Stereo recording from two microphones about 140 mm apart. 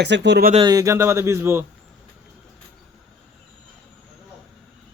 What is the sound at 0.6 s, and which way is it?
Speech, 25° right (ahead or behind).